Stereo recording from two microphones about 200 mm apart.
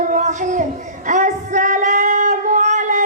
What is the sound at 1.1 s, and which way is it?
Singing, 40° right (ahead or behind).